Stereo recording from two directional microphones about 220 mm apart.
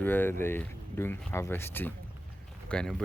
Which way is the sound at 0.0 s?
10° left (ahead or behind).